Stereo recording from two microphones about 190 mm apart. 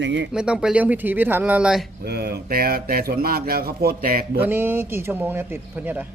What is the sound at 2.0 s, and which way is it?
Speech, 60° right (ahead or behind).